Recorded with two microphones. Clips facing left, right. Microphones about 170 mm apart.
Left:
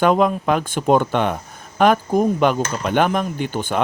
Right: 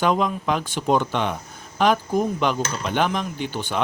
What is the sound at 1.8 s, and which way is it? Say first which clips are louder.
Cutlery: left 4 dB; 50° left (ahead or behind).